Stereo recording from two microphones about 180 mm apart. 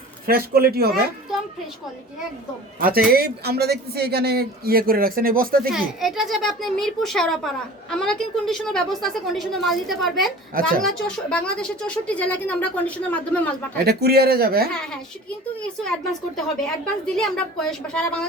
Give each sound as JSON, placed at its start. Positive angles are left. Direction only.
{"t": 0.3, "sound": "speech", "side_deg": -55}
{"t": 3.1, "sound": "speech", "side_deg": -60}
{"t": 5.7, "sound": "a child's voice", "side_deg": 0}
{"t": 13.8, "sound": "speech", "side_deg": -60}
{"t": 14.7, "sound": "a child's voice", "side_deg": 5}
{"t": 16.3, "sound": "a child's voice", "side_deg": 5}